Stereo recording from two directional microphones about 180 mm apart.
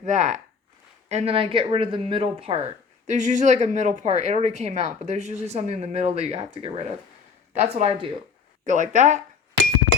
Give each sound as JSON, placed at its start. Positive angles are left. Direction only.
{"t": 0.0, "sound": "speech", "side_deg": -40}
{"t": 3.1, "sound": "speech", "side_deg": -40}
{"t": 8.6, "sound": "speech", "side_deg": -45}